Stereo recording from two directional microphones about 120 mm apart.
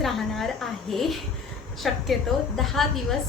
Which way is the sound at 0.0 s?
Centre (ahead or behind).